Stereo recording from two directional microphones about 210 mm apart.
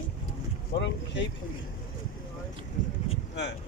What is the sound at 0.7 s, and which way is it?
Speech, 60° left (ahead or behind).